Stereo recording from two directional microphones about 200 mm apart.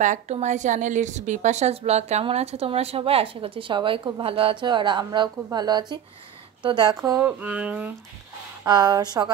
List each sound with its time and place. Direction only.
0.0 s a woman's voice: 35° right (ahead or behind); by 7.9 s 5° right (ahead or behind)
8.6 s a woman's voice: 20° right (ahead or behind)